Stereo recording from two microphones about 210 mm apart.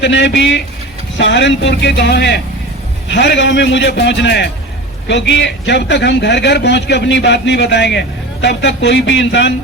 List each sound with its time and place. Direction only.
0.0 s a man's voice: 55° left (ahead or behind)